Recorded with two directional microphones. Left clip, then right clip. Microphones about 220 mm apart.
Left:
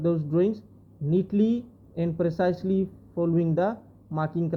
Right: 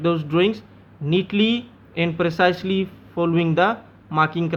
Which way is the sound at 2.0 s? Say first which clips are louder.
Right 7 dB; 15° right (ahead or behind).